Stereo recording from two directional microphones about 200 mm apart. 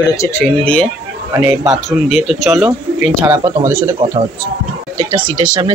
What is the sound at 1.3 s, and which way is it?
A man's voice, 10° right (ahead or behind).